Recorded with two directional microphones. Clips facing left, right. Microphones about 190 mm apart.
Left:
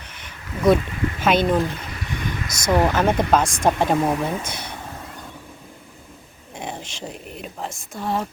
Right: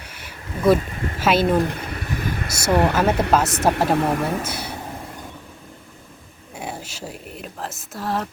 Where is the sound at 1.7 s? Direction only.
55° right (ahead or behind).